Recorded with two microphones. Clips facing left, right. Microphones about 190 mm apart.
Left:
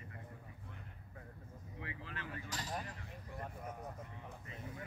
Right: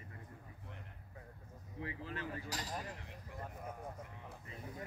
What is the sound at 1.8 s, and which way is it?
Speech, 35° right (ahead or behind).